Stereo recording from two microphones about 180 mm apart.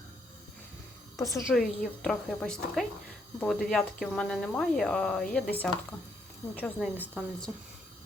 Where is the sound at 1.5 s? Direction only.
Centre (ahead or behind).